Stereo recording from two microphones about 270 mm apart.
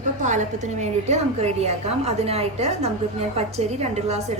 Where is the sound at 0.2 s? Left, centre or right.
Right.